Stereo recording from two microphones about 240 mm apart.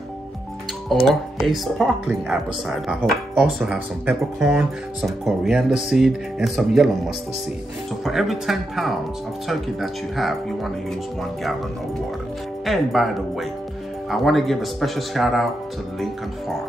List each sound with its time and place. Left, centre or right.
1.0 s speech: centre
8.0 s speech: centre
12.6 s speech: centre